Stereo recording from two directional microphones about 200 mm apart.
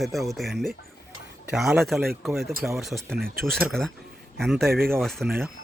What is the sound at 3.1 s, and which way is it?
Speech, 50° right (ahead or behind).